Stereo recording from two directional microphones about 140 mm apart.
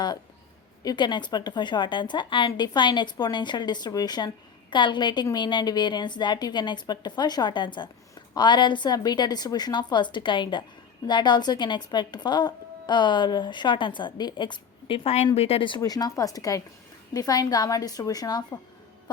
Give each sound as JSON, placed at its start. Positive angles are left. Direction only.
{"t": 0.9, "sound": "a woman's voice", "side_deg": 35}